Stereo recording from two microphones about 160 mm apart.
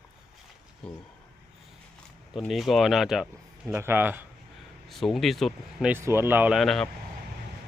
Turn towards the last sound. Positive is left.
turn(degrees=0)  # may be behind; listen again after turning